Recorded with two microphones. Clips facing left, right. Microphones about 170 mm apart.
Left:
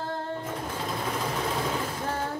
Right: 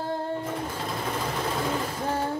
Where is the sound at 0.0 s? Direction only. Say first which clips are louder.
Right 3 dB; 10° right (ahead or behind).